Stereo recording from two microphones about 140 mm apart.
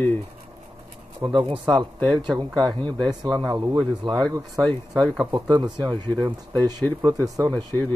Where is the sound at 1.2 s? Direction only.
35° right (ahead or behind).